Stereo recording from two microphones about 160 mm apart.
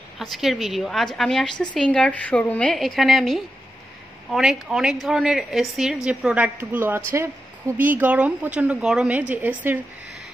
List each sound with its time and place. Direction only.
0.2 s a woman's voice: centre (ahead or behind)